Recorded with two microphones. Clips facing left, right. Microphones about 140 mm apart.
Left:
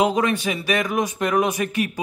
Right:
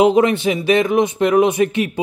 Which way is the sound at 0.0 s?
25° right (ahead or behind).